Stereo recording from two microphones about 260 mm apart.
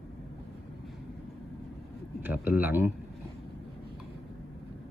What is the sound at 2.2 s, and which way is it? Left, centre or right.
Speech, centre.